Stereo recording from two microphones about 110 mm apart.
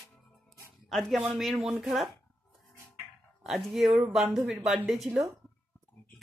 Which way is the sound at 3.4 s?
Centre (ahead or behind).